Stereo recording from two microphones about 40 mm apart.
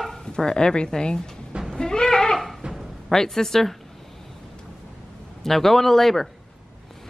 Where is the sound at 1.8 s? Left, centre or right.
Centre.